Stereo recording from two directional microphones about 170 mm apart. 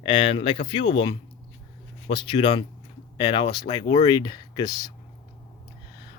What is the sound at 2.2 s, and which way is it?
Speech, 30° left (ahead or behind).